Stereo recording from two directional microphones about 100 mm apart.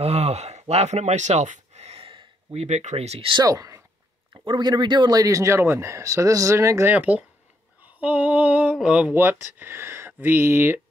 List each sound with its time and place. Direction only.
0.0 s speech: 90° right
3.4 s speech: 35° right (ahead or behind)
4.3 s speech: 50° right (ahead or behind); by 6.9 s 30° right (ahead or behind)
6.9 s speech: 15° right (ahead or behind)
7.8 s female singing: 15° right (ahead or behind)
8.7 s speech: 10° right (ahead or behind)